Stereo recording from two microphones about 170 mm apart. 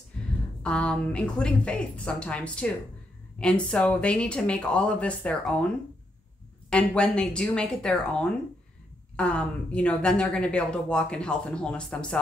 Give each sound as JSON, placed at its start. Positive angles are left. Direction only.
{"t": 0.2, "sound": "a sound", "side_deg": 5}
{"t": 0.6, "sound": "speech", "side_deg": 5}
{"t": 6.7, "sound": "a woman's voice", "side_deg": 10}